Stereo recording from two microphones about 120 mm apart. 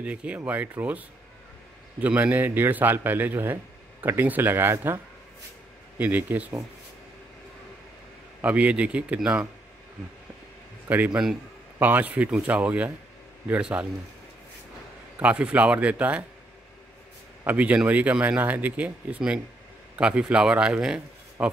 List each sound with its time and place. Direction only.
0.0 s speech: 10° right (ahead or behind)
8.4 s speech: 10° right (ahead or behind)
10.9 s speech: 15° right (ahead or behind)
15.1 s speech: 10° right (ahead or behind)
17.5 s a man's voice: 10° right (ahead or behind)